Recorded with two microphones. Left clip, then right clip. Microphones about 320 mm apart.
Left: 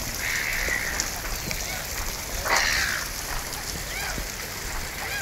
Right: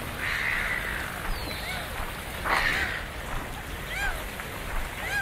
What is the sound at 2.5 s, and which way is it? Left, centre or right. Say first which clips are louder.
Crow: left 3 dB; centre.